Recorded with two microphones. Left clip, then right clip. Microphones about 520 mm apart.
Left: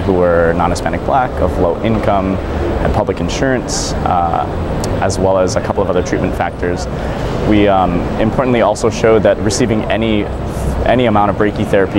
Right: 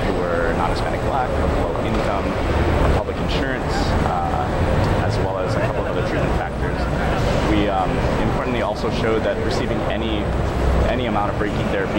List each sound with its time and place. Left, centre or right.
7.5 s speech: left